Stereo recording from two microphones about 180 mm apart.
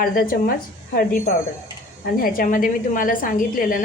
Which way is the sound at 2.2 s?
50° left (ahead or behind).